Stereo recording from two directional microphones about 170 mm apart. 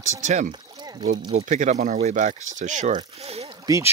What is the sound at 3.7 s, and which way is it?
Speech, 20° right (ahead or behind).